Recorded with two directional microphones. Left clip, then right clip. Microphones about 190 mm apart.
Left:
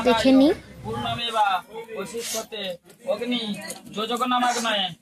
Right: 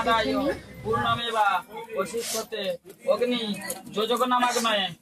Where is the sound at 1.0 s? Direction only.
Centre (ahead or behind).